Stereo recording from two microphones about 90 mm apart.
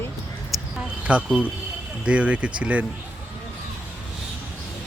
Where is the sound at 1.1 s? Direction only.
15° right (ahead or behind).